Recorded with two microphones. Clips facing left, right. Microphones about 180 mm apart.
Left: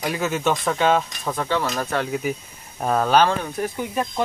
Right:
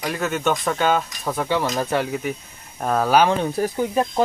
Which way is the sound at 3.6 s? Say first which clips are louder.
Right 4 dB; 35° right (ahead or behind).